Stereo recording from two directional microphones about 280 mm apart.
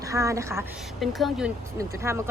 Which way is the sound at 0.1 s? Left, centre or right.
Centre.